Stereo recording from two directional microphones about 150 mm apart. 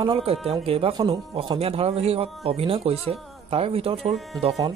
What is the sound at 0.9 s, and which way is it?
A woman's voice, 30° right (ahead or behind).